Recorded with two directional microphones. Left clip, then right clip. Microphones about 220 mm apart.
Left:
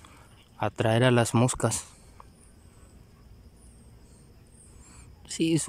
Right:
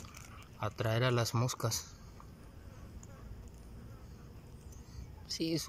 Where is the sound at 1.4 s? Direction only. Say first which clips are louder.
Left 10 dB; 65° left (ahead or behind).